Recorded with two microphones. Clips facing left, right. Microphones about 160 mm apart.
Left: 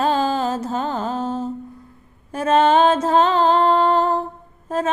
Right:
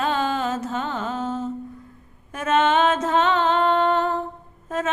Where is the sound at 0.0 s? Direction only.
35° left (ahead or behind).